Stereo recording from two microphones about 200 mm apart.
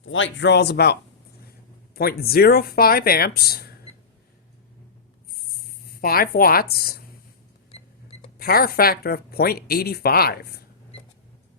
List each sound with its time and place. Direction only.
0.0 s speech: 75° left (ahead or behind); by 0.9 s 55° left (ahead or behind)
2.0 s speech: 50° left (ahead or behind)
6.0 s speech: 45° left (ahead or behind)
7.7 s cash register: 30° left (ahead or behind)
8.4 s speech: 50° left (ahead or behind)